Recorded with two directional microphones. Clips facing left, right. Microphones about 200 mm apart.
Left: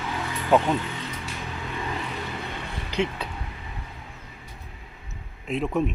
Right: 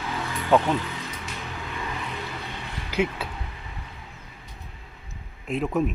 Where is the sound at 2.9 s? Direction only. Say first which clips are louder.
Right 1 dB; 5° right (ahead or behind).